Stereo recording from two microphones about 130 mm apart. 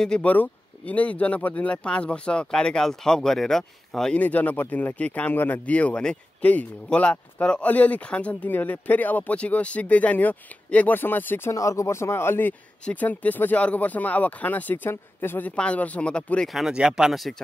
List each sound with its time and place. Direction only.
0.0 s speech: 10° left (ahead or behind)